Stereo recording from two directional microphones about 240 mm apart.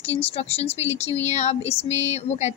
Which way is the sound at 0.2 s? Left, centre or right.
Left.